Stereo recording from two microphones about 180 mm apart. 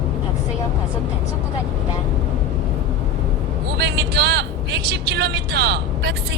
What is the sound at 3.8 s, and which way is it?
Speech, 65° right (ahead or behind).